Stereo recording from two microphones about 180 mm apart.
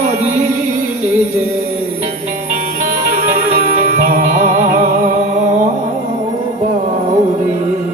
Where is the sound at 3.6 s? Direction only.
55° right (ahead or behind).